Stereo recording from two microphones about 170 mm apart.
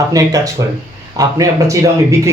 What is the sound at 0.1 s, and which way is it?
Speech, 20° right (ahead or behind).